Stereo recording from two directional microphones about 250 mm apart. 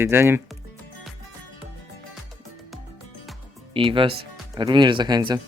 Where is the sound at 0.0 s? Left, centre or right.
Centre.